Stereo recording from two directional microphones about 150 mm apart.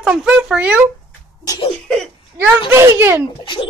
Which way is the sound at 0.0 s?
5° right (ahead or behind).